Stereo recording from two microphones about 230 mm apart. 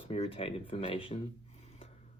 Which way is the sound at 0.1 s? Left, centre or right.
Left.